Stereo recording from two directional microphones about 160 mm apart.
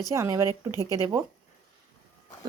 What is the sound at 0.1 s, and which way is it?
Speech, 20° right (ahead or behind).